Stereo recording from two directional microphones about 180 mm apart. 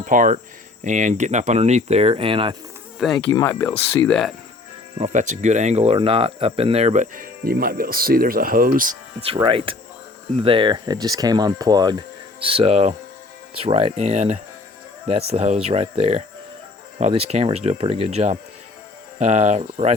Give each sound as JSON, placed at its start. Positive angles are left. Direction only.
{"t": 0.0, "sound": "speech", "side_deg": -45}
{"t": 3.2, "sound": "speech", "side_deg": 15}
{"t": 4.9, "sound": "speech", "side_deg": -40}
{"t": 9.2, "sound": "speech", "side_deg": -30}